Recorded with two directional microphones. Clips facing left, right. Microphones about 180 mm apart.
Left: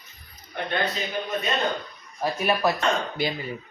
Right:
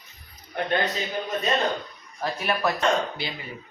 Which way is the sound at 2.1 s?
15° left (ahead or behind).